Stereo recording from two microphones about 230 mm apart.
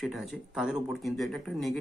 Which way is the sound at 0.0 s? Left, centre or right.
Centre.